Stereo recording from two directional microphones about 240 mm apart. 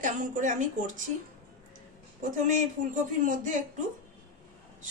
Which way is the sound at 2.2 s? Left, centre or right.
Right.